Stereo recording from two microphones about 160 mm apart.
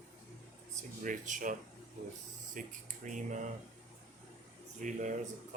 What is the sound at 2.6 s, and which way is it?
Speech, 55° right (ahead or behind).